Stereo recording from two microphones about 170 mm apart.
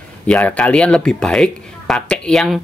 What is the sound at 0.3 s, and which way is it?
Speech, 10° left (ahead or behind).